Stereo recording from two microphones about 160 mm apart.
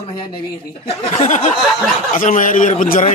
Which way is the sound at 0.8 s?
50° left (ahead or behind).